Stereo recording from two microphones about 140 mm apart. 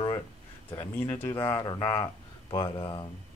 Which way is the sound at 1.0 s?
15° left (ahead or behind).